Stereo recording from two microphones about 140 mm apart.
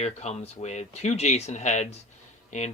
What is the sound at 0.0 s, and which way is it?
Speech, 50° left (ahead or behind).